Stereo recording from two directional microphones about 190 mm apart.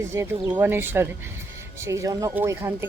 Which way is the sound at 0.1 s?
15° right (ahead or behind).